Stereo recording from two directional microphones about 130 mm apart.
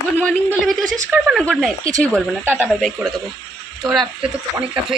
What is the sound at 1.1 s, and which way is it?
Speech, centre (ahead or behind).